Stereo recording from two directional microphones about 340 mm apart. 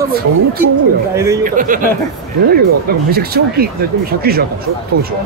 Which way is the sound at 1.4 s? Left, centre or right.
Right.